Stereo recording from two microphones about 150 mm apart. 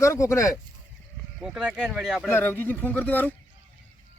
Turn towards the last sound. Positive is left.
turn(degrees=10)  # may be behind; listen again after turning